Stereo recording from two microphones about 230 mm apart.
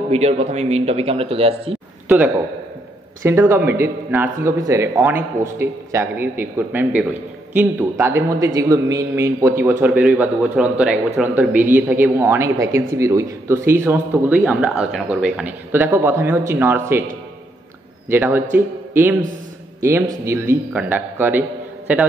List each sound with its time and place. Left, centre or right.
0.1 s speech: right
2.0 s speech: centre
18.1 s speech: centre